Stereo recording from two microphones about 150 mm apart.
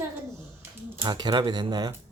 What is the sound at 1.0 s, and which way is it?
Speech, 30° right (ahead or behind).